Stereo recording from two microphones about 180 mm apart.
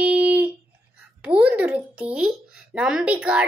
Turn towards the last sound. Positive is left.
turn(degrees=-5)  # may be behind; listen again after turning